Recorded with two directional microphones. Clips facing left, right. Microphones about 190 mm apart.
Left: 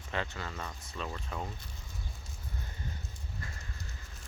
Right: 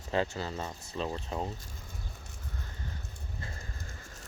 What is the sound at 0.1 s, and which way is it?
Speech, 30° right (ahead or behind).